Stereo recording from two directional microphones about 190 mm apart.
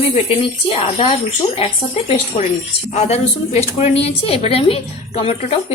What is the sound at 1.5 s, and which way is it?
A woman's voice, 30° left (ahead or behind).